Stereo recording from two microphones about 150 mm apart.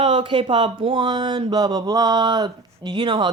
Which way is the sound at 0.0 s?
35° right (ahead or behind).